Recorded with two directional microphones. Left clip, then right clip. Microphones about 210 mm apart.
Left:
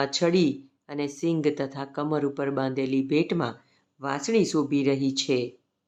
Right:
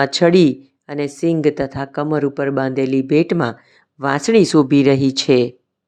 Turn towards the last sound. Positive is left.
turn(degrees=-35)  # may be behind; listen again after turning